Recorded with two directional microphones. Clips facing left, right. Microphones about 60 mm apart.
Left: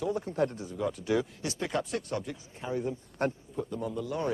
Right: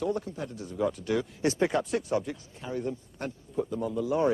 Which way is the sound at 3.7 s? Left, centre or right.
Centre.